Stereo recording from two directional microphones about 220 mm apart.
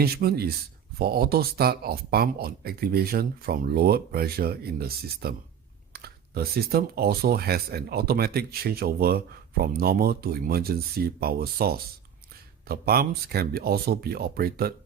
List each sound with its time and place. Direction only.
0.0 s speech: 45° right (ahead or behind)